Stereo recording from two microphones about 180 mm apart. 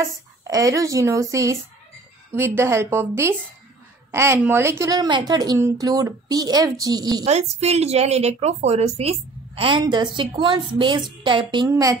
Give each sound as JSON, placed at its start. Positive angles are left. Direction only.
{"t": 0.0, "sound": "a woman's voice", "side_deg": -20}
{"t": 7.2, "sound": "a woman's voice", "side_deg": -35}